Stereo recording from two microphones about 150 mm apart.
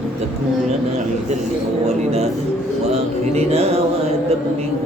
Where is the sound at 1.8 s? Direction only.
45° right (ahead or behind).